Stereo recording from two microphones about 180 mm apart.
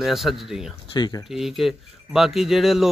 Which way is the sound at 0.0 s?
Centre (ahead or behind).